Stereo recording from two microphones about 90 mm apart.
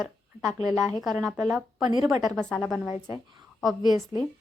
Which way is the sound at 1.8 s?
55° right (ahead or behind).